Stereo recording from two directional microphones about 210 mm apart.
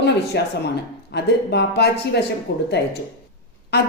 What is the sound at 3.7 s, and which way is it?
Speech, 50° left (ahead or behind).